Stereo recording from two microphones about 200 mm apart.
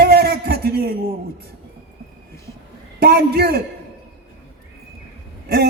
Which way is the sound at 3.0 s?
50° right (ahead or behind).